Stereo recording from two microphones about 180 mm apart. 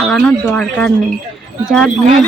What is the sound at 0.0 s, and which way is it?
Speech, 5° left (ahead or behind).